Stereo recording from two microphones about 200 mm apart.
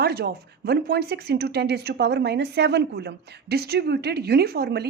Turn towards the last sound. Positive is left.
turn(degrees=-55)  # may be behind; listen again after turning